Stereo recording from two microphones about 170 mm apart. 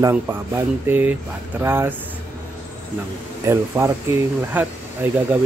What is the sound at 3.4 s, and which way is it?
Speech, 15° right (ahead or behind).